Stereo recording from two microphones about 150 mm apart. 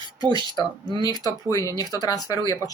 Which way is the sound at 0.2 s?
30° right (ahead or behind).